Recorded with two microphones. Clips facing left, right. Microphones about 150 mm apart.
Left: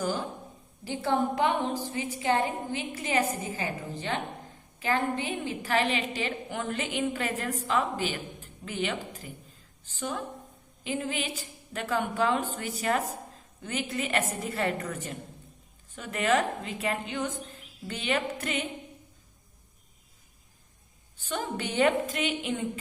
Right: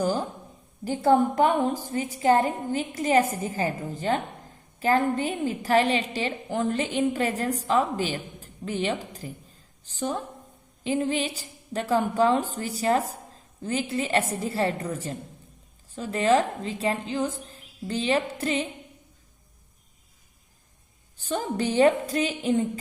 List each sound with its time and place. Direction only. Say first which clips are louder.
0.0 s a sound: right 5 dB; 40° right (ahead or behind)
0.9 s a woman's voice: right 7 dB; 45° right (ahead or behind)
21.2 s a woman's voice: right 5 dB; 35° right (ahead or behind)